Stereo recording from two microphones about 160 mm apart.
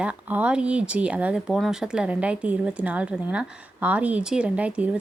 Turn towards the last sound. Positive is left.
turn(degrees=-10)  # may be behind; listen again after turning